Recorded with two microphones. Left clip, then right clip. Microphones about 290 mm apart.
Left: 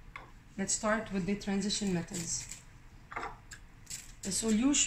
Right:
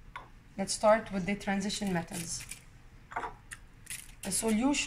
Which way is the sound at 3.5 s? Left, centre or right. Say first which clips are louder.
Right 2 dB; right.